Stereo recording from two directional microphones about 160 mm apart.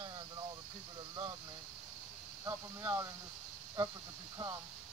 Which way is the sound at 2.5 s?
20° right (ahead or behind).